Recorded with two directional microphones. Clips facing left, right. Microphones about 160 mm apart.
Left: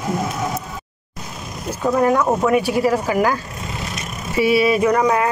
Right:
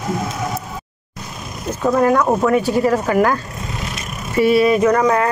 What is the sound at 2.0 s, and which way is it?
Speech, 15° left (ahead or behind).